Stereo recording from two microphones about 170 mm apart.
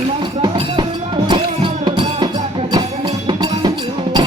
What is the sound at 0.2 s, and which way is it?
Music, 25° right (ahead or behind).